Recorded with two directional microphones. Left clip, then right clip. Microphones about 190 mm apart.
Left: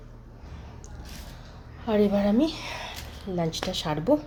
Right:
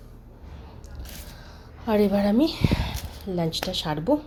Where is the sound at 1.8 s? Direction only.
15° right (ahead or behind).